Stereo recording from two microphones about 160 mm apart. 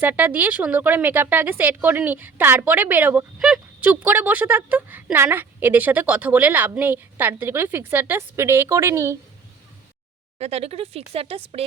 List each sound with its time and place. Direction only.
0.0 s speech: 10° right (ahead or behind)
10.3 s speech: 40° right (ahead or behind)